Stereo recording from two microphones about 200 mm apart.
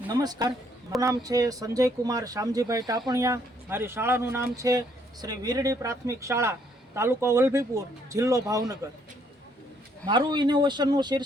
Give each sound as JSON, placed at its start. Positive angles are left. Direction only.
{"t": 0.1, "sound": "a man's voice", "side_deg": -20}
{"t": 10.1, "sound": "speech", "side_deg": -25}